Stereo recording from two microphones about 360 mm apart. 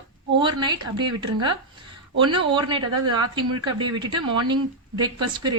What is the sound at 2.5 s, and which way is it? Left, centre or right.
A woman's voice, centre.